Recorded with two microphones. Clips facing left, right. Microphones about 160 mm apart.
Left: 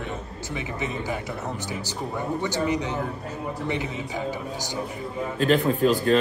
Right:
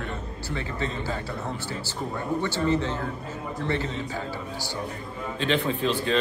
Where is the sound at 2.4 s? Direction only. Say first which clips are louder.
Right 1 dB; 15° left (ahead or behind).